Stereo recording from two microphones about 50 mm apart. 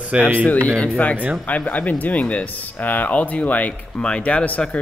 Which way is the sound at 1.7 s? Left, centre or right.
Left.